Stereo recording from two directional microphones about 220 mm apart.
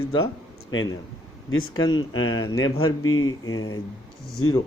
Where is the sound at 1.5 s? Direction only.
70° left (ahead or behind).